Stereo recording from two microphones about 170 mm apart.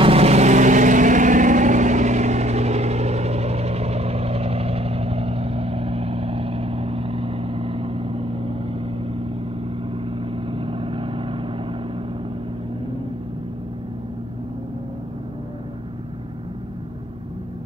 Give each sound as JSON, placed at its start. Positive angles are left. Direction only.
{"t": 0.0, "sound": "vehicle", "side_deg": -35}